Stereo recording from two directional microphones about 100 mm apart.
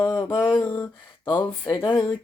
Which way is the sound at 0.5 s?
25° left (ahead or behind).